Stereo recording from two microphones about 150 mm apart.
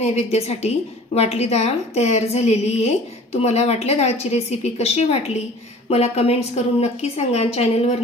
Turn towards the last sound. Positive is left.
turn(degrees=40)  # may be behind; listen again after turning